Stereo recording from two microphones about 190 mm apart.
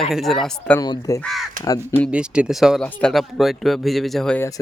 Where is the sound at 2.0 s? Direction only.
5° right (ahead or behind).